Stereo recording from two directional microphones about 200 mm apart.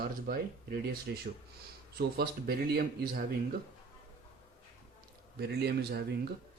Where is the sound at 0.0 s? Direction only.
50° right (ahead or behind).